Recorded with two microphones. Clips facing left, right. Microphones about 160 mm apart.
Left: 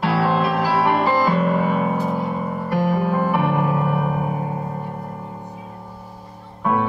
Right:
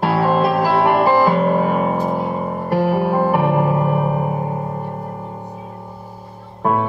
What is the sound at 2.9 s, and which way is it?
Music, 30° right (ahead or behind).